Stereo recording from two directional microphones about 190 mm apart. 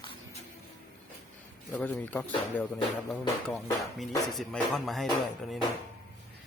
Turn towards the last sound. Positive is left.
turn(degrees=0)  # may be behind; listen again after turning